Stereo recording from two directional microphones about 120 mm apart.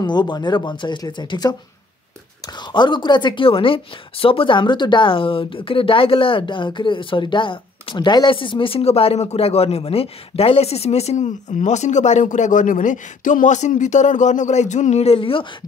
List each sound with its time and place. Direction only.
0.0 s speech: 40° left (ahead or behind)
2.7 s speech: 40° left (ahead or behind)